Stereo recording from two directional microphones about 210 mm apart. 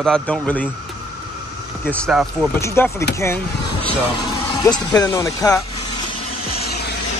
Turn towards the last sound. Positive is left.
turn(degrees=15)  # may be behind; listen again after turning